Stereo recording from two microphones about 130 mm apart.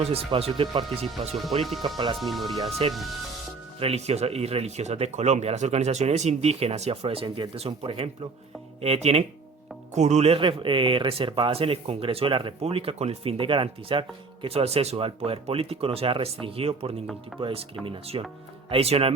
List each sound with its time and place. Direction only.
0.0 s speech: 50° right (ahead or behind)
0.9 s speech: centre (ahead or behind)
2.6 s speech: 50° right (ahead or behind)
2.9 s speech: centre (ahead or behind)
3.8 s speech: 50° right (ahead or behind)